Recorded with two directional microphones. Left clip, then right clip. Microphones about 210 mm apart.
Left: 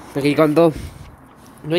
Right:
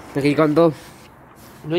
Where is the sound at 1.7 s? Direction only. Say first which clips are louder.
Left 2 dB; 20° left (ahead or behind).